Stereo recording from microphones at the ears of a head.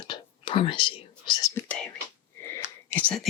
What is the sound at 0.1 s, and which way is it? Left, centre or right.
Whispering, left.